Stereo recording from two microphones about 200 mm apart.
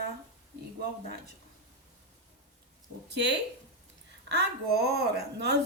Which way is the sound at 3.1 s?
60° right (ahead or behind).